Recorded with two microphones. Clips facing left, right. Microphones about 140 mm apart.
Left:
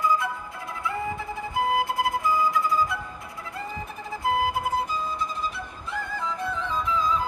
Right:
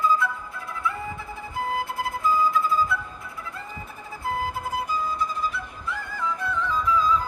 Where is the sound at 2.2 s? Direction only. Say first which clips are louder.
Right 5 dB; 85° left.